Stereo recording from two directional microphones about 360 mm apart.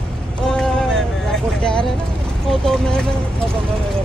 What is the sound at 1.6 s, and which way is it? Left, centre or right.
Speech, centre.